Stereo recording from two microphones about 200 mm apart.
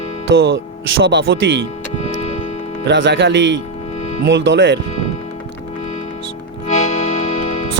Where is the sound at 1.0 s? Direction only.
65° right (ahead or behind).